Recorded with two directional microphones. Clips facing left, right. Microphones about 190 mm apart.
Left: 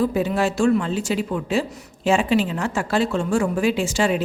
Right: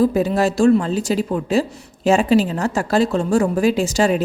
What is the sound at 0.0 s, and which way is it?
A woman's voice, 40° right (ahead or behind).